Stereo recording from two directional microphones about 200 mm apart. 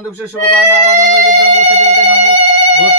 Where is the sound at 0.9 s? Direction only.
40° right (ahead or behind).